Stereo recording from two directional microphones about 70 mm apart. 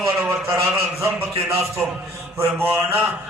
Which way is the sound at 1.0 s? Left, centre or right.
Right.